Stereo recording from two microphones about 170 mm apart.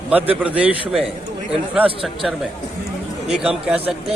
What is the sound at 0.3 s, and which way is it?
Speech, 10° right (ahead or behind).